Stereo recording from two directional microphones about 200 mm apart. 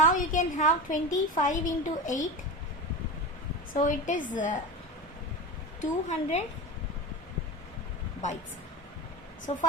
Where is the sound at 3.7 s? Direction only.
40° left (ahead or behind).